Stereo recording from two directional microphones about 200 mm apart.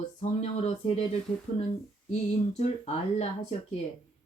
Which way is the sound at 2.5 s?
35° left (ahead or behind).